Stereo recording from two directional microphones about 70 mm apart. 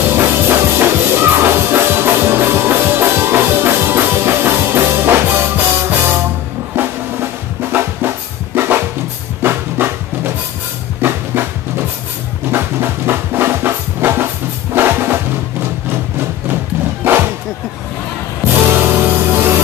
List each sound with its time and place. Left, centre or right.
0.0 s music: right
6.7 s drum: right
9.4 s music: right
17.0 s bow-wow: right
18.5 s music: right